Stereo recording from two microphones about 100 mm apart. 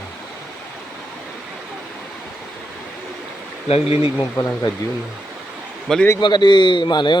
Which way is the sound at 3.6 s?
90° left.